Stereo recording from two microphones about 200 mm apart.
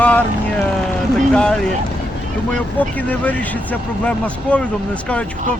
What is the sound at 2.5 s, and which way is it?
Speech, 5° left (ahead or behind).